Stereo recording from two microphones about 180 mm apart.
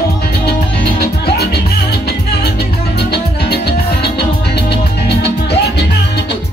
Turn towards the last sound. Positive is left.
turn(degrees=70)  # may be behind; listen again after turning